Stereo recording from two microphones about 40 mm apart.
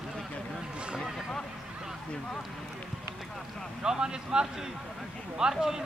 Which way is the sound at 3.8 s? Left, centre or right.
Centre.